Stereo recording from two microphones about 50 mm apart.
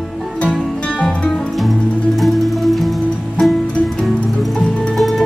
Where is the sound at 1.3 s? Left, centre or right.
Centre.